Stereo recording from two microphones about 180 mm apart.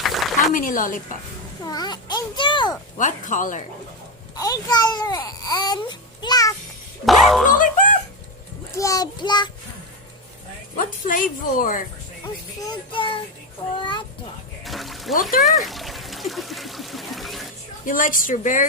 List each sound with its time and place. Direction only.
0.0 s a sound: centre (ahead or behind)
0.5 s a woman's voice: 50° left (ahead or behind)
1.6 s speech: 20° left (ahead or behind)
3.0 s a woman's voice: 45° left (ahead or behind)
4.4 s speech: 20° left (ahead or behind)
7.0 s speech: centre (ahead or behind)
8.7 s speech: 20° left (ahead or behind)
10.8 s a woman's voice: 50° left (ahead or behind)
12.6 s speech: 25° left (ahead or behind)
13.7 s a sound: 25° left (ahead or behind)
14.6 s pour: centre (ahead or behind)
15.1 s a woman's voice: 50° left (ahead or behind)
15.4 s water: centre (ahead or behind)
17.8 s a woman's voice: 50° left (ahead or behind)